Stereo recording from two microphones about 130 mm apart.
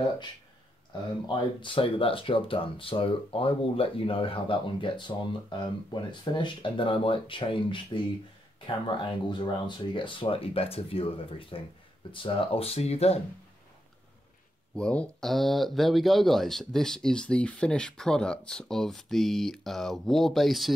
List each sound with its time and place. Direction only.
1.2 s speech: 40° left (ahead or behind); by 13.2 s 55° left (ahead or behind)
14.8 s speech: 5° left (ahead or behind)